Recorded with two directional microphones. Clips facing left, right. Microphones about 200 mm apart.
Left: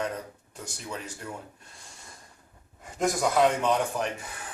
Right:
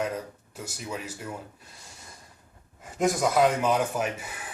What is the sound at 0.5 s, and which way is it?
Speech, 5° right (ahead or behind).